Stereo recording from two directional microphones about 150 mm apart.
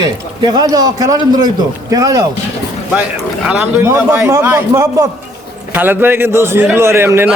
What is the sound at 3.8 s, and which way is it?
A man's voice, 20° right (ahead or behind).